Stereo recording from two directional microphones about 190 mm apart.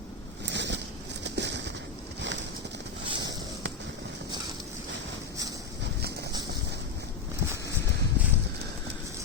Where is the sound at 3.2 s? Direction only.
70° right (ahead or behind).